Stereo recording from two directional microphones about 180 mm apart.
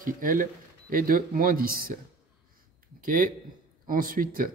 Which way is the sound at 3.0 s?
50° right (ahead or behind).